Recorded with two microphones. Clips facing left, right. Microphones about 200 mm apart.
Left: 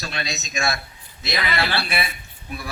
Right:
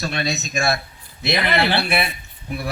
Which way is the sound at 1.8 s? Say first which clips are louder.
Right 5 dB; 60° right (ahead or behind).